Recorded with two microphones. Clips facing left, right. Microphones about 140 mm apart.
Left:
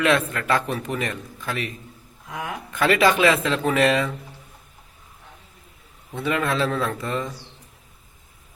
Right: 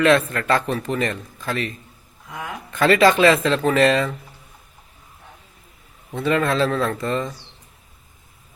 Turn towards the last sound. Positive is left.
turn(degrees=10)  # may be behind; listen again after turning